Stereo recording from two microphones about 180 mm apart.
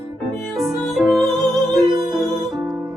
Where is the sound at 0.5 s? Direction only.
Centre (ahead or behind).